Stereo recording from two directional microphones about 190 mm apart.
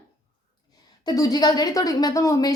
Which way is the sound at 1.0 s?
20° left (ahead or behind).